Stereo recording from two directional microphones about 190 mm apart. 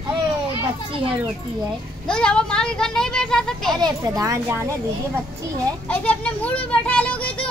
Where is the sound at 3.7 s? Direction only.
20° right (ahead or behind).